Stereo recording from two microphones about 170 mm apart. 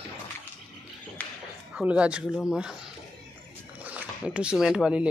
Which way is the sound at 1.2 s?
10° left (ahead or behind).